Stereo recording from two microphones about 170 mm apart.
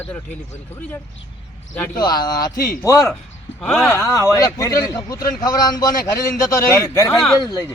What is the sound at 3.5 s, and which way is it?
Speech, centre (ahead or behind).